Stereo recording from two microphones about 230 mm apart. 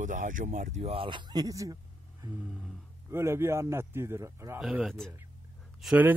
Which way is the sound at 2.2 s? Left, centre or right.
Centre.